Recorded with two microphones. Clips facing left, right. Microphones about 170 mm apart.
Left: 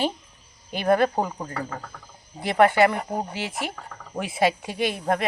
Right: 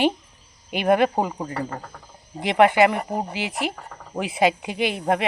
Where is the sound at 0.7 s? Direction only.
15° right (ahead or behind).